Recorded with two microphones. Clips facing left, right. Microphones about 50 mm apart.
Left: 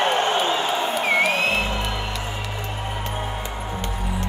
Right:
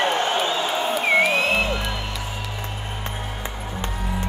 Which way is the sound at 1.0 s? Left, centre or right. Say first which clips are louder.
Right 2 dB; right.